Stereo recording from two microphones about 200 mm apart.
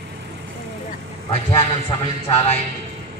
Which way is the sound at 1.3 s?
30° left (ahead or behind).